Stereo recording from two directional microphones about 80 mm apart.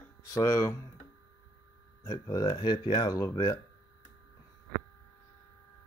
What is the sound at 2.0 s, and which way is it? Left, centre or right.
Speech, left.